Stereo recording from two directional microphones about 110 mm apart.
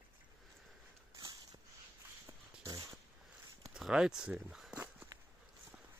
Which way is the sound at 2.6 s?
30° right (ahead or behind).